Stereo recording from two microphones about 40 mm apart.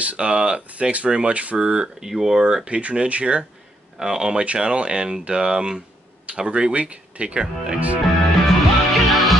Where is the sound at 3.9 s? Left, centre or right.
Centre.